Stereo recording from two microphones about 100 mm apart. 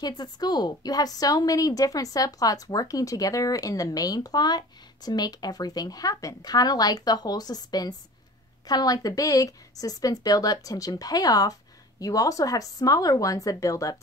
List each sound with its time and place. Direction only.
0.0 s a woman's voice: 45° left (ahead or behind)